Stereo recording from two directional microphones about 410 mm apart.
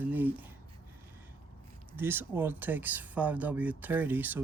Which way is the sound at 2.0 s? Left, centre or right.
Centre.